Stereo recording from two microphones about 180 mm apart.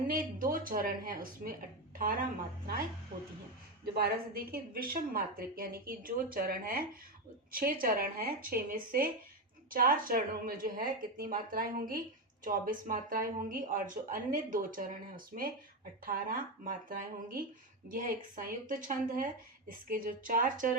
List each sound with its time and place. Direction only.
0.1 s speech: 50° right (ahead or behind)
3.9 s a woman's voice: 55° right (ahead or behind)